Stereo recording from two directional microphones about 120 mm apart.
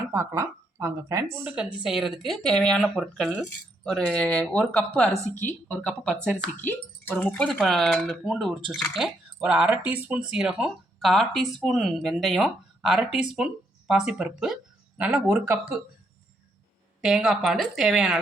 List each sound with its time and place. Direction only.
0.0 s speech: 20° right (ahead or behind)
1.5 s speech: 5° right (ahead or behind)
17.0 s speech: 5° right (ahead or behind)